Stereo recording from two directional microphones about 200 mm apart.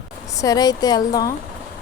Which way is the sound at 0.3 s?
15° left (ahead or behind).